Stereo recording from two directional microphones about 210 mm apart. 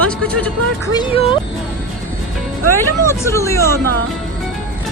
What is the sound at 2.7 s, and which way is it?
Speech, 15° left (ahead or behind).